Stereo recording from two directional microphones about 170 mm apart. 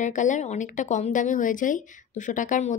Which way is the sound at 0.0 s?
45° left (ahead or behind).